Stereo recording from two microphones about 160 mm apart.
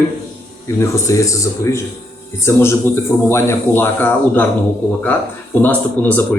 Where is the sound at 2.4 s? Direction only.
15° left (ahead or behind).